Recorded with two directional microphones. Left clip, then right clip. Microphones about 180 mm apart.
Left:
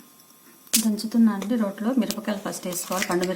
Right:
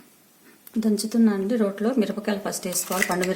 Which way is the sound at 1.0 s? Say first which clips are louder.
Right 1 dB; 35° right (ahead or behind).